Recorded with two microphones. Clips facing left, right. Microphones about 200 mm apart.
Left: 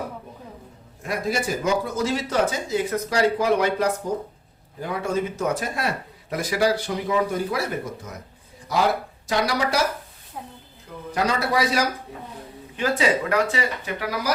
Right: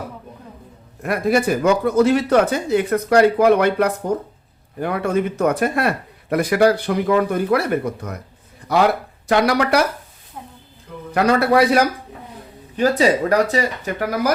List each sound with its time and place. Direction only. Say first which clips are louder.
1.0 s speech: right 7 dB; 60° right (ahead or behind)
11.1 s speech: right 8 dB; 60° right (ahead or behind)
12.7 s speech: right 6 dB; 40° right (ahead or behind)